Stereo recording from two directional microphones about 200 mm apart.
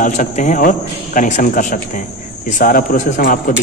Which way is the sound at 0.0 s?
40° left (ahead or behind).